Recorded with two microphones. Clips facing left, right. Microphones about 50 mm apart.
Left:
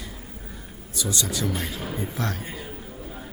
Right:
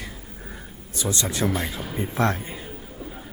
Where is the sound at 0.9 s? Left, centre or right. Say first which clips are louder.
Right 2 dB; right.